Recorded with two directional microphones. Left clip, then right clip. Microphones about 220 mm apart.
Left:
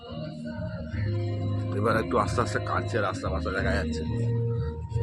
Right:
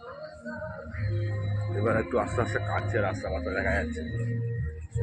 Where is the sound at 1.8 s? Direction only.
10° left (ahead or behind).